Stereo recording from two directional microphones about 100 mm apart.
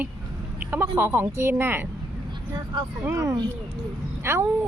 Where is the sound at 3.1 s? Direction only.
30° right (ahead or behind).